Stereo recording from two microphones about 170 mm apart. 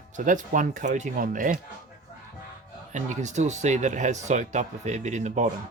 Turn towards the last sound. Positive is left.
turn(degrees=-45)  # may be behind; listen again after turning